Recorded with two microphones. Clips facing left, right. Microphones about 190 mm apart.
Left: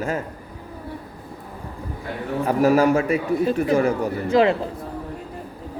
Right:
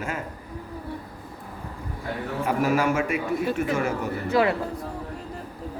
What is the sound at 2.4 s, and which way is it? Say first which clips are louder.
A man's voice: left 6 dB; 35° left (ahead or behind).